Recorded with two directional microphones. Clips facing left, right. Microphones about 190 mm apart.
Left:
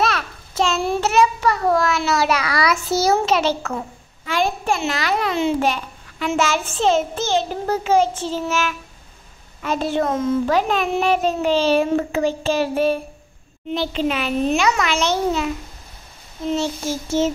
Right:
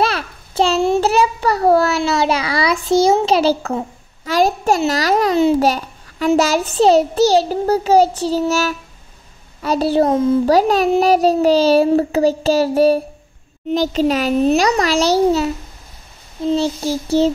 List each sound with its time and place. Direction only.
0.0 s a child's voice: 30° right (ahead or behind)